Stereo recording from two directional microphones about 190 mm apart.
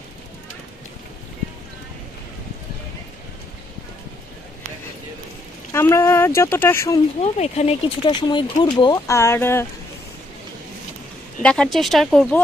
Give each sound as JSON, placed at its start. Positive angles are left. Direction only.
{"t": 5.7, "sound": "speech", "side_deg": 15}
{"t": 7.2, "sound": "speech", "side_deg": 35}
{"t": 11.4, "sound": "speech", "side_deg": 5}